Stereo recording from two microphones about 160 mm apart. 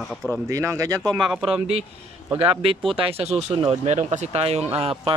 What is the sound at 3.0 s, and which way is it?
Speech, 40° right (ahead or behind).